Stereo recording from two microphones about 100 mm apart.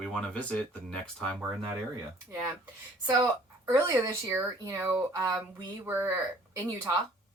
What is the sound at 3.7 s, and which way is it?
Speech, 35° right (ahead or behind).